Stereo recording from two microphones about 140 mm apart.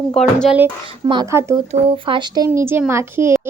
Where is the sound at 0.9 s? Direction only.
35° right (ahead or behind).